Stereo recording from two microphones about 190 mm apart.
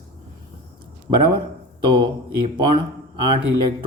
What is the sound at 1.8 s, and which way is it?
Speech, 25° right (ahead or behind).